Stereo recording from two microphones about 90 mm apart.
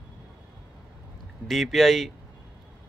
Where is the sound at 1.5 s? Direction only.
Centre (ahead or behind).